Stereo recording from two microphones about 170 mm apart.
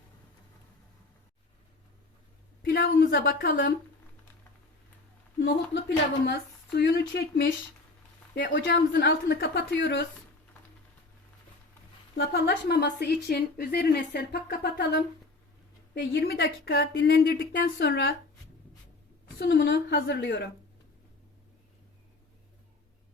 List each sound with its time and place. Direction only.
2.6 s a woman's voice: 65° left (ahead or behind)
6.2 s speech: 80° left
8.5 s speech: 85° left
12.1 s speech: 75° left (ahead or behind)
16.0 s speech: 65° left (ahead or behind)
19.4 s speech: 90° left